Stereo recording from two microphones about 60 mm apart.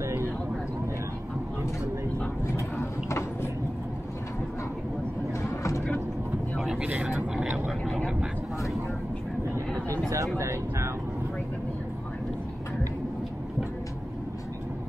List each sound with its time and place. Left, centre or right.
0.0 s vehicle: right
2.8 s a sound: left
5.4 s vehicle: left
6.8 s vehicle: right
10.0 s vehicle: right